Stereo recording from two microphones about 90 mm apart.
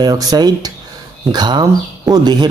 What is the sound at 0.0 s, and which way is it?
Speech, 45° right (ahead or behind).